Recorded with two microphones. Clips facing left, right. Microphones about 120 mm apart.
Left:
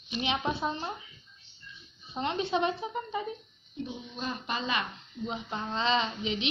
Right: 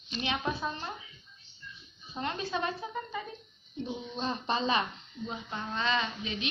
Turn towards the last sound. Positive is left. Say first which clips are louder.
# left 3 dB
turn(degrees=25)  # may be behind; listen again after turning